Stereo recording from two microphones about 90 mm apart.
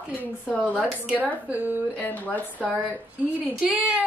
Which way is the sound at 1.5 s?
20° right (ahead or behind).